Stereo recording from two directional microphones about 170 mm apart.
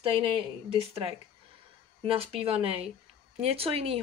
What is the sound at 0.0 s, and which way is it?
Speech, 30° right (ahead or behind).